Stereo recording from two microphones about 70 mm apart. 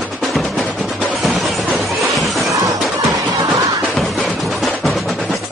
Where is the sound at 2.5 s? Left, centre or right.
Right.